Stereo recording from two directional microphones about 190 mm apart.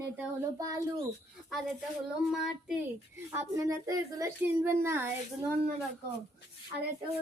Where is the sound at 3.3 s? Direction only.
15° right (ahead or behind).